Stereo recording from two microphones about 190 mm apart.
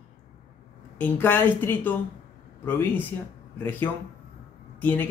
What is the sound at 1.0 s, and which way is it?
A woman's voice, 10° left (ahead or behind).